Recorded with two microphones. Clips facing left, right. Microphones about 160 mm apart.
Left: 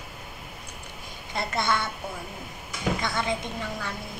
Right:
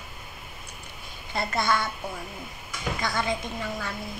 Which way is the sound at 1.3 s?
20° left (ahead or behind).